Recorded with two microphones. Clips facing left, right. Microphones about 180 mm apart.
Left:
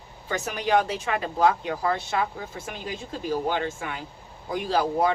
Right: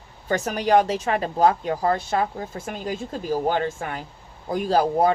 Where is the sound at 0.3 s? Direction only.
45° right (ahead or behind).